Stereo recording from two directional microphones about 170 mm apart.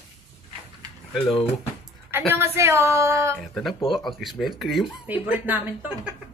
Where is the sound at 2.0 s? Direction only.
15° right (ahead or behind).